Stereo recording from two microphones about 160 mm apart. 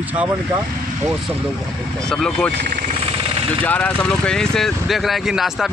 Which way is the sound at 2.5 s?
55° right (ahead or behind).